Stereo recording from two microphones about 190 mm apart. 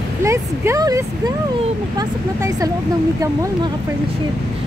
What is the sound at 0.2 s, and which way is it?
Speech, 15° right (ahead or behind).